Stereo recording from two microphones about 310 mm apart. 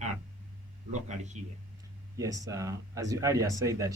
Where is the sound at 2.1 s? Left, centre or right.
Centre.